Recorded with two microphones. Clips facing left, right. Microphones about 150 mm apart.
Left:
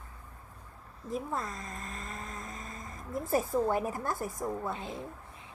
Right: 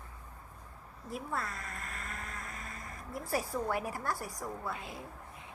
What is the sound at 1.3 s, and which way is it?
Vehicle, 20° left (ahead or behind).